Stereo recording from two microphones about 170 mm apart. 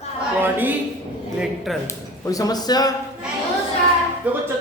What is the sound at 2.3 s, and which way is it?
Speech, 20° left (ahead or behind).